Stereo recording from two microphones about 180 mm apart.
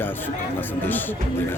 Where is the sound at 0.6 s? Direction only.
10° left (ahead or behind).